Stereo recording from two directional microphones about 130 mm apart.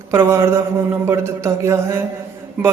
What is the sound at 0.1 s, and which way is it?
A man's voice, 20° right (ahead or behind).